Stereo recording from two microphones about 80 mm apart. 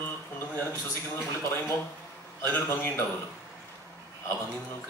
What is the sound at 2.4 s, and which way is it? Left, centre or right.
Mantra, left.